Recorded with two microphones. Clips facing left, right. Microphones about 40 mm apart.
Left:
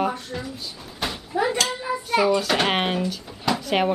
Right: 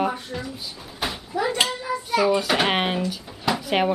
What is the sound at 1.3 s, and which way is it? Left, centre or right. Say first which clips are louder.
Speech: left 2 dB; centre.